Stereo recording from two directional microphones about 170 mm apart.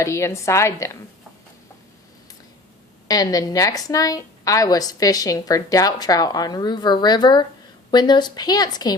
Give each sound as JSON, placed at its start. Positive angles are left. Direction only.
{"t": 0.0, "sound": "a woman's voice", "side_deg": 15}
{"t": 3.1, "sound": "a woman's voice", "side_deg": 20}